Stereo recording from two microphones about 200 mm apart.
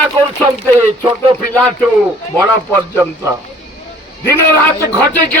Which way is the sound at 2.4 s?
15° right (ahead or behind).